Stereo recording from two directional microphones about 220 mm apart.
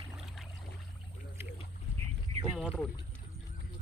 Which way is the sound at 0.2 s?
Centre (ahead or behind).